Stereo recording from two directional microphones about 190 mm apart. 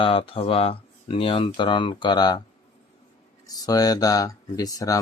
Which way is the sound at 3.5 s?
20° left (ahead or behind).